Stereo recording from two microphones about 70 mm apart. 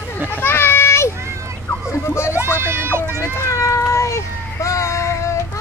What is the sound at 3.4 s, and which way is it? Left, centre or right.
Cat, left.